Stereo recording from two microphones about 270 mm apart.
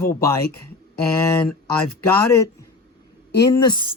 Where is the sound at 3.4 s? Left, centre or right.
Centre.